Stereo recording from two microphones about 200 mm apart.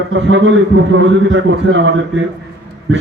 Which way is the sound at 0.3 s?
70° right (ahead or behind).